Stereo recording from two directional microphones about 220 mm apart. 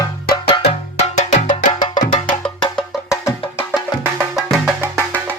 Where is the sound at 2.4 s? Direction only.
10° left (ahead or behind).